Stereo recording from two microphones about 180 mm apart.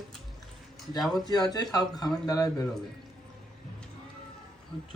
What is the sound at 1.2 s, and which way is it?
Speech, 20° left (ahead or behind).